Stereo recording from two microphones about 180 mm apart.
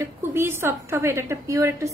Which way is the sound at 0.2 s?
15° right (ahead or behind).